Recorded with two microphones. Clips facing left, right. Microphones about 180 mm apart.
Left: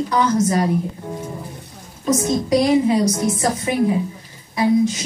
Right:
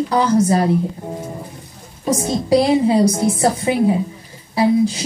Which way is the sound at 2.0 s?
30° right (ahead or behind).